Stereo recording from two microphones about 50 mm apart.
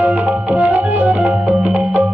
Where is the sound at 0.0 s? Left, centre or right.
Right.